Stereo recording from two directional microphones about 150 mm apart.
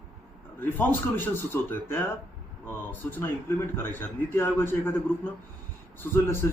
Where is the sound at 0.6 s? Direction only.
10° left (ahead or behind).